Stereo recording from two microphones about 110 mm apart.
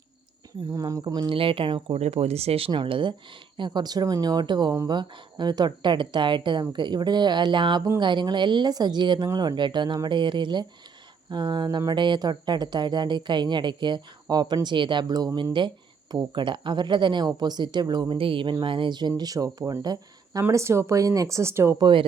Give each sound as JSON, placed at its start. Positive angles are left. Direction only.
{"t": 0.7, "sound": "a woman's voice", "side_deg": -30}
{"t": 2.0, "sound": "speech", "side_deg": -70}
{"t": 3.7, "sound": "a woman's voice", "side_deg": -35}
{"t": 16.1, "sound": "a woman's voice", "side_deg": -45}
{"t": 21.8, "sound": "a woman's voice", "side_deg": -45}